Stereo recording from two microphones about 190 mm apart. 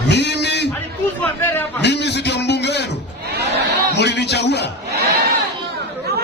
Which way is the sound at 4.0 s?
60° left (ahead or behind).